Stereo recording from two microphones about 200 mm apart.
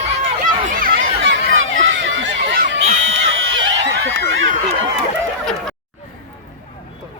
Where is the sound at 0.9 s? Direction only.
75° right (ahead or behind).